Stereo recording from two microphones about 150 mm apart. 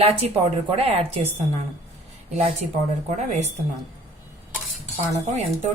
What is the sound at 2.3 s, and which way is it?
Speech, 50° right (ahead or behind).